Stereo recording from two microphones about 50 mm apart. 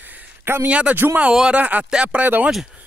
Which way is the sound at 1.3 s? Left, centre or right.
Centre.